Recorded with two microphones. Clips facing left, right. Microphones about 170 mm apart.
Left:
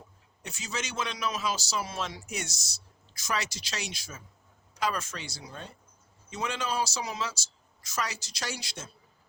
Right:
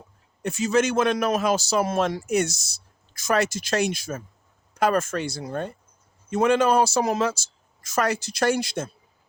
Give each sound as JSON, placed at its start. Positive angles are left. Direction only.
{"t": 0.4, "sound": "a man's voice", "side_deg": -55}